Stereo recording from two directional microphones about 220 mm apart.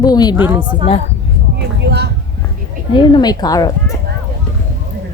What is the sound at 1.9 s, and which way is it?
Vehicle, 50° right (ahead or behind).